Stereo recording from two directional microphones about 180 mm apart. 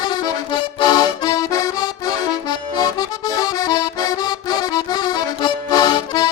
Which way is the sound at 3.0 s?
20° left (ahead or behind).